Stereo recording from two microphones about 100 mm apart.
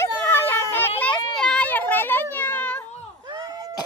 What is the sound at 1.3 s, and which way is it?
Children playing, 5° left (ahead or behind).